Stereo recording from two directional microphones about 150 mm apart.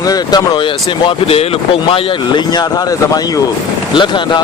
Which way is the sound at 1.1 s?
40° left (ahead or behind).